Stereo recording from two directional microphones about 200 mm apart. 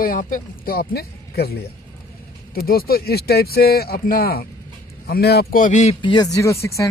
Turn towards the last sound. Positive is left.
turn(degrees=15)  # may be behind; listen again after turning